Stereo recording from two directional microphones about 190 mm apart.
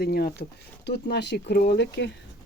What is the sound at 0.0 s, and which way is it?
Speech, 55° left (ahead or behind).